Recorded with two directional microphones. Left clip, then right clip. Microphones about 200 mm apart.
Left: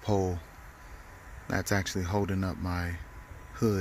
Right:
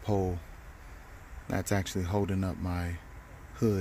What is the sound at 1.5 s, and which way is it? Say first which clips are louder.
Speech: left 2 dB; centre (ahead or behind).